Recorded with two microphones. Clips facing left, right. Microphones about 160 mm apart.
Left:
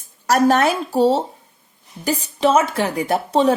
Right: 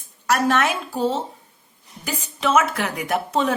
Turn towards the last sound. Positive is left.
turn(degrees=30)  # may be behind; listen again after turning